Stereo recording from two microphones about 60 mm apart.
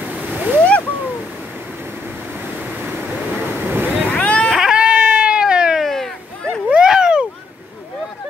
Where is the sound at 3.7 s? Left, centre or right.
Right.